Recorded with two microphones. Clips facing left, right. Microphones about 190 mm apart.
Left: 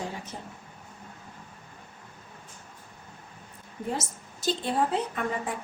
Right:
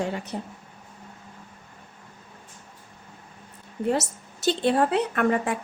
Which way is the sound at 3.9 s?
70° right (ahead or behind).